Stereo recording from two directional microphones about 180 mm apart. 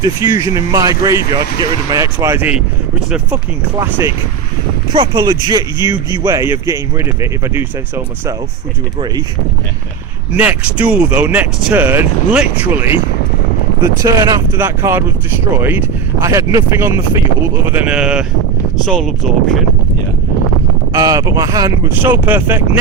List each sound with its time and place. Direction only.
0.0 s speech: 20° right (ahead or behind)
4.9 s speech: 25° right (ahead or behind)
10.3 s speech: 10° right (ahead or behind)
13.8 s speech: 20° right (ahead or behind)
16.2 s speech: 15° right (ahead or behind); by 19.5 s 5° left (ahead or behind)
20.9 s speech: 20° right (ahead or behind)